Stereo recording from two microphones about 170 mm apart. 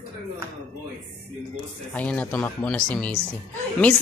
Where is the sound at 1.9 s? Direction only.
10° left (ahead or behind).